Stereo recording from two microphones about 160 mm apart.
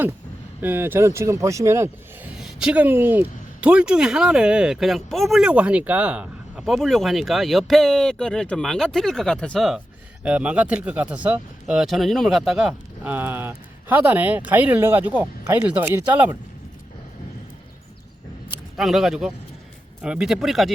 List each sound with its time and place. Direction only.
0.6 s speech: 15° right (ahead or behind)
2.4 s speech: 5° right (ahead or behind)
18.8 s speech: centre (ahead or behind)